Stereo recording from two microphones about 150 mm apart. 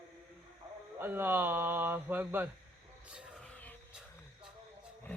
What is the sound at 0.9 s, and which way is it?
Speech, 15° right (ahead or behind).